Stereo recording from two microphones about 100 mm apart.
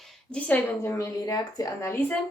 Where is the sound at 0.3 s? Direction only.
15° left (ahead or behind).